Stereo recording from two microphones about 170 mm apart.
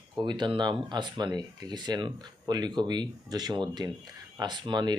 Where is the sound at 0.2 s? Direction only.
25° right (ahead or behind).